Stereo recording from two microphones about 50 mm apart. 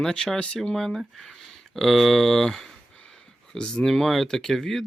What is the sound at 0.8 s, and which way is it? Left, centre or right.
Speech, centre.